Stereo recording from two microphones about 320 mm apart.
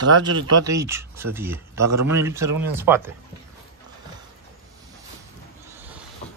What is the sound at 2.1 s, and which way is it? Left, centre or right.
Speech, centre.